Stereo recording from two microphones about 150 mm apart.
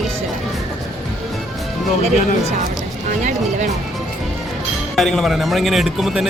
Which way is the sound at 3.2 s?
55° right (ahead or behind).